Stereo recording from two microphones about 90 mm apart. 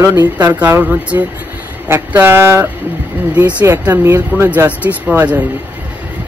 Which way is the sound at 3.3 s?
15° right (ahead or behind).